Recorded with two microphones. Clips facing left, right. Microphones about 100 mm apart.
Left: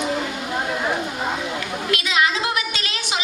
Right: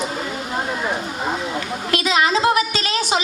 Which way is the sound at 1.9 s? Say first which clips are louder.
Right 3 dB; 35° right (ahead or behind).